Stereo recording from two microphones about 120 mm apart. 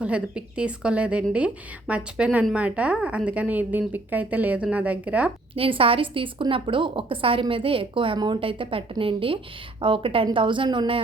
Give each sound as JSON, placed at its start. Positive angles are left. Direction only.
{"t": 0.0, "sound": "speech", "side_deg": -10}
{"t": 5.5, "sound": "a woman's voice", "side_deg": -50}